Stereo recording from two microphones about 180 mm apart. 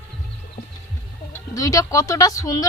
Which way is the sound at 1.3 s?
20° left (ahead or behind).